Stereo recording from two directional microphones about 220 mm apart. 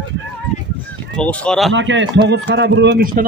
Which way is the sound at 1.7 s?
55° right (ahead or behind).